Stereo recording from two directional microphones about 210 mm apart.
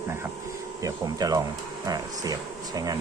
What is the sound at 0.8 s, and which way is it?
Speech, 15° right (ahead or behind).